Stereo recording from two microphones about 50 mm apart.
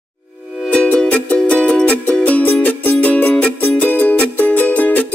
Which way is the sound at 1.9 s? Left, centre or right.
Left.